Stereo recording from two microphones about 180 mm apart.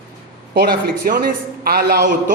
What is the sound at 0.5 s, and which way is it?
A man's voice, 55° right (ahead or behind).